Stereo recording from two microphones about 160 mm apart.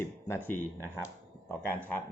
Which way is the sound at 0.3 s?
15° left (ahead or behind).